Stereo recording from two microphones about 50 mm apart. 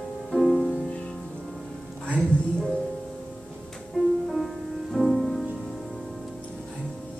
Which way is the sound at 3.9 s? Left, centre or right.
Centre.